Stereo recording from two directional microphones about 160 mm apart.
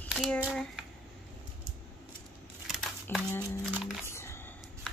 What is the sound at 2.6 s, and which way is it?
Crumpling, centre (ahead or behind).